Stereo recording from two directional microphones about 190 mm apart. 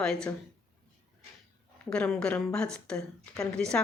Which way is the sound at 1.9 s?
5° left (ahead or behind).